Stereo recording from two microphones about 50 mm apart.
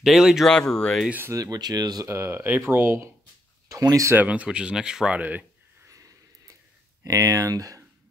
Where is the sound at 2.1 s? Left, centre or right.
Right.